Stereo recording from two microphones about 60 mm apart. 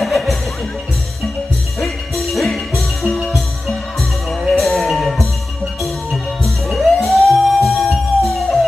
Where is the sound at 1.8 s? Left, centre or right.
Centre.